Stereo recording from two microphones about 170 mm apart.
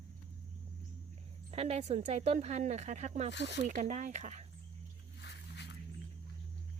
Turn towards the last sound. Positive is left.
turn(degrees=90)